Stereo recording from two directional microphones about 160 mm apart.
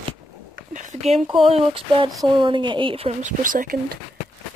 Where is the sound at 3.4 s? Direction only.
55° right (ahead or behind).